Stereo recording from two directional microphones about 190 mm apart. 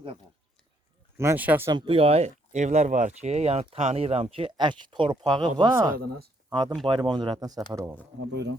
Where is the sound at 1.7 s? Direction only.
25° right (ahead or behind).